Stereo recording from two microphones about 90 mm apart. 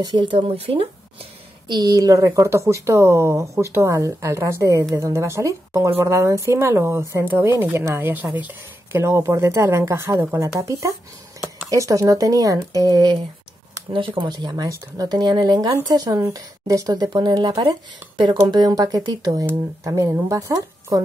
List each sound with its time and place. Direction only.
0.0 s speech: 60° right (ahead or behind); by 0.8 s 90° right
1.7 s speech: 45° right (ahead or behind)
13.9 s speech: 65° right (ahead or behind); by 17.6 s 50° right (ahead or behind)
17.6 s speech: 65° right (ahead or behind); by 21.0 s 40° right (ahead or behind)